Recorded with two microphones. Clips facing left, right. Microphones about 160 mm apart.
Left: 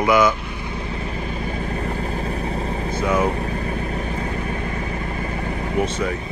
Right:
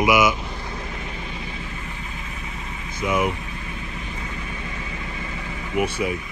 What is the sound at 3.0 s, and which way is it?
Speech, 30° left (ahead or behind).